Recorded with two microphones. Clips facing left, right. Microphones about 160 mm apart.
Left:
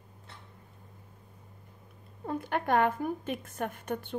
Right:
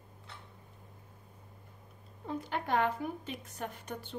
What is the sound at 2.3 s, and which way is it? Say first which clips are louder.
A woman's voice: left 5 dB; 55° left (ahead or behind).